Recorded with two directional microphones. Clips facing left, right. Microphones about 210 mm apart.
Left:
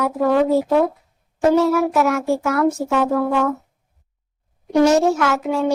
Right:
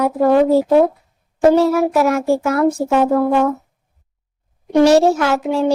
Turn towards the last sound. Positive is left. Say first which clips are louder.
# right 3 dB
turn(degrees=-30)  # may be behind; listen again after turning